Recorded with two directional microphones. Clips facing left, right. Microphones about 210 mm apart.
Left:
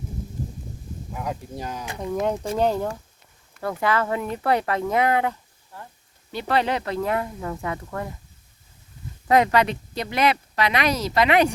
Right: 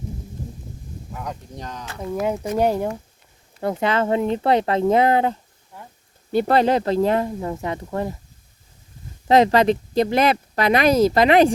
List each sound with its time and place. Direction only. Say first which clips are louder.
1.1 s speech: left 2 dB; 5° left (ahead or behind)
2.2 s speech: right 3 dB; 5° right (ahead or behind); by 5.4 s 30° right (ahead or behind)
5.7 s a sound: even; 15° right (ahead or behind)
6.3 s speech: right 6 dB; 40° right (ahead or behind); by 8.1 s 25° right (ahead or behind)
9.2 s speech: right 4 dB; 30° right (ahead or behind)